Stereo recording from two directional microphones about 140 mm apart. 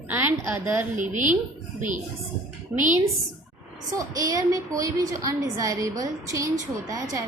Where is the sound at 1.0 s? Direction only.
65° right (ahead or behind).